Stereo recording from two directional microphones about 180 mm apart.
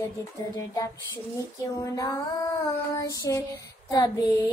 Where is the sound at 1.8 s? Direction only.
20° left (ahead or behind).